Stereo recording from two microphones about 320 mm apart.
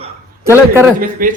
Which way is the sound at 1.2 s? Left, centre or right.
Right.